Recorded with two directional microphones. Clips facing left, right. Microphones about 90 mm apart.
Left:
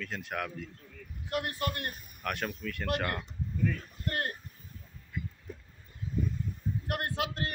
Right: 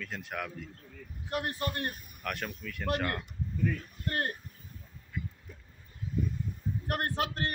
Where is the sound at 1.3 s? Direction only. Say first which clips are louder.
Even; 30° right (ahead or behind).